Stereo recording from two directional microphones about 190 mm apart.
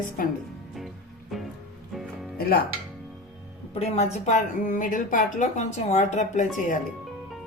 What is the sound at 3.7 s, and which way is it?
A woman's voice, 35° left (ahead or behind).